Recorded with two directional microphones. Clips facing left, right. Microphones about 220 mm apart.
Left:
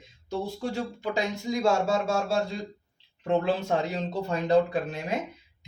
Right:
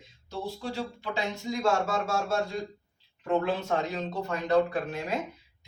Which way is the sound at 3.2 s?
25° left (ahead or behind).